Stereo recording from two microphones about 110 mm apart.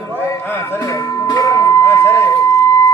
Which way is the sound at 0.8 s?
30° left (ahead or behind).